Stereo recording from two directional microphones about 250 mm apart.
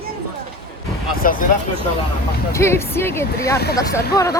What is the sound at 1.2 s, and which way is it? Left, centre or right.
Speech, left.